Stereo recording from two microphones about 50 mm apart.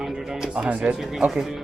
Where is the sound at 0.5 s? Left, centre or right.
Right.